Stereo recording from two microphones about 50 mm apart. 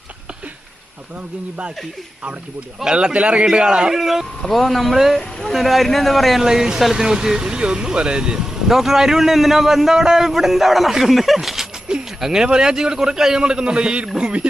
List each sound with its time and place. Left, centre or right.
2.8 s speech: centre
3.9 s speech: centre
6.4 s speech: centre